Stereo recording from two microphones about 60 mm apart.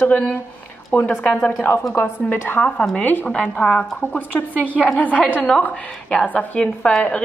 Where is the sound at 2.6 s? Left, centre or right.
Centre.